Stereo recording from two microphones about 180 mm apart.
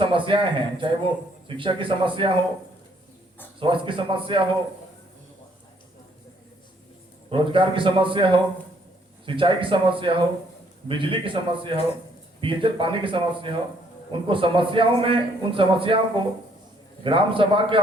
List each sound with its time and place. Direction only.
0.0 s a man's voice: 30° right (ahead or behind)
3.6 s a man's voice: 30° right (ahead or behind)
7.3 s a man's voice: 30° right (ahead or behind)